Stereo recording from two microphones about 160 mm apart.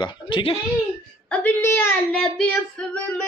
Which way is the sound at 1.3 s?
10° left (ahead or behind).